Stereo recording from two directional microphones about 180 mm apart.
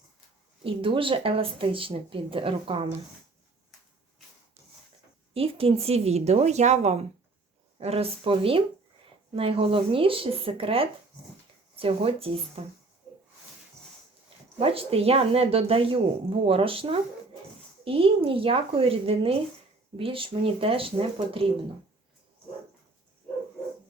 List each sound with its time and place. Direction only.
0.6 s speech: 30° right (ahead or behind)
5.3 s speech: 30° right (ahead or behind)
14.6 s speech: 30° right (ahead or behind)